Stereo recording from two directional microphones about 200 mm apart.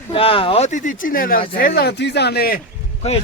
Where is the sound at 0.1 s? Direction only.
25° left (ahead or behind); by 2.6 s 50° left (ahead or behind).